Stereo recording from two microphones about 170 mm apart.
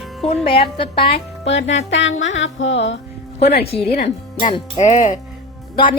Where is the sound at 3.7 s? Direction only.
35° left (ahead or behind).